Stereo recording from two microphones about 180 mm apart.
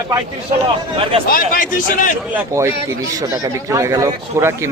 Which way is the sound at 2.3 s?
15° right (ahead or behind).